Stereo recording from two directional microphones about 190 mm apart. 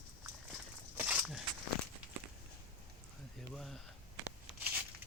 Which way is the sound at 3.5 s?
Centre (ahead or behind).